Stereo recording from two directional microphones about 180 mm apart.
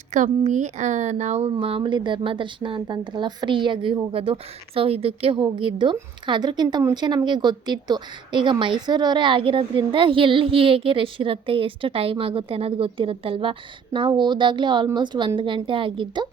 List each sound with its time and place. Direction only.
0.1 s speech: 45° right (ahead or behind)